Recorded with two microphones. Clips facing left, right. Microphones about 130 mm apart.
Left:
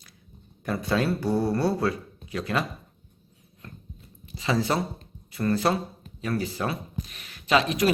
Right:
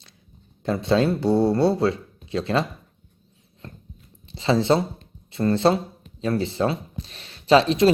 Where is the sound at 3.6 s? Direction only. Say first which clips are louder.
Right 3 dB; 30° right (ahead or behind).